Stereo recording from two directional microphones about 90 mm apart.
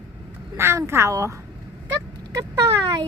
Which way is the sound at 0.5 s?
30° right (ahead or behind).